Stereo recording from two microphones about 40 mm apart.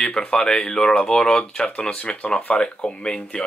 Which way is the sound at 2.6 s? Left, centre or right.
Left.